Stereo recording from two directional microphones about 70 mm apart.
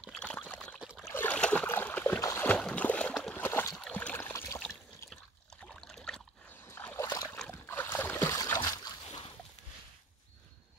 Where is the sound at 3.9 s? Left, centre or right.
Left.